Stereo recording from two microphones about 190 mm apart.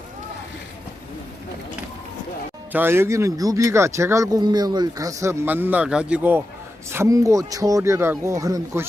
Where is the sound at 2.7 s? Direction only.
10° right (ahead or behind).